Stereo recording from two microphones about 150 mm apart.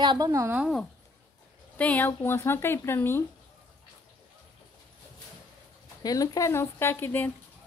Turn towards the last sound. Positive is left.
turn(degrees=15)  # may be behind; listen again after turning